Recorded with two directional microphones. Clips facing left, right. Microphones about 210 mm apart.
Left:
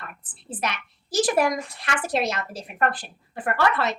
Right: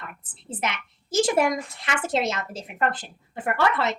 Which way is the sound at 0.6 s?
20° right (ahead or behind).